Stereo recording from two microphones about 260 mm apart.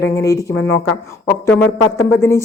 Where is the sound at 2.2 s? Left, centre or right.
Centre.